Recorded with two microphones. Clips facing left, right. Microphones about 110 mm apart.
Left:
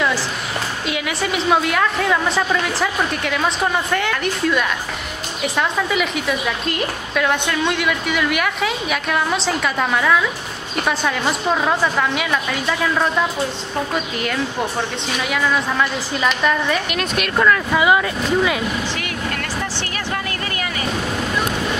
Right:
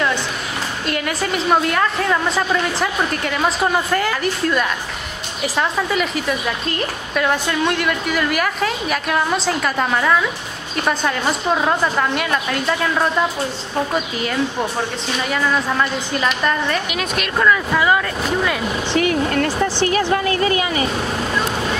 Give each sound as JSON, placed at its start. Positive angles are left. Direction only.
{"t": 0.8, "sound": "a woman's voice", "side_deg": 5}
{"t": 18.9, "sound": "speech", "side_deg": -30}